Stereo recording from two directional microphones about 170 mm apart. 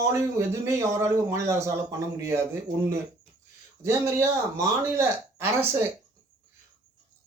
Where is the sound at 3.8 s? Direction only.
15° right (ahead or behind).